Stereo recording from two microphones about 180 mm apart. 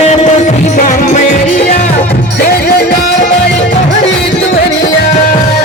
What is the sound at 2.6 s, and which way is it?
Music, 65° left (ahead or behind).